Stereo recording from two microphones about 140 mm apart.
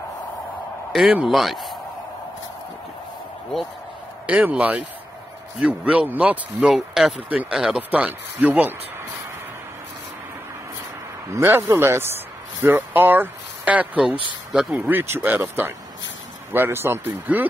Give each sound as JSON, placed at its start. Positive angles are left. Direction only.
{"t": 0.9, "sound": "speech", "side_deg": -5}
{"t": 4.3, "sound": "speech", "side_deg": -10}
{"t": 11.2, "sound": "speech", "side_deg": -20}